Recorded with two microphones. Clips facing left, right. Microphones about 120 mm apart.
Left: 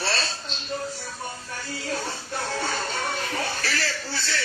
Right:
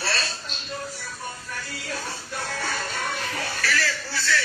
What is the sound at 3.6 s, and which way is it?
Speech, 30° left (ahead or behind).